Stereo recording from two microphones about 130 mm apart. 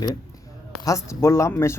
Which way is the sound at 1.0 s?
20° left (ahead or behind).